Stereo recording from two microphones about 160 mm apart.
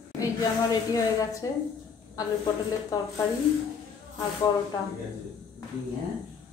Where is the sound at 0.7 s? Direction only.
20° left (ahead or behind).